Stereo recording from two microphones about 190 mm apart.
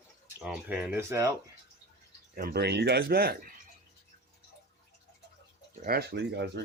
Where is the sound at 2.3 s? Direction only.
50° right (ahead or behind).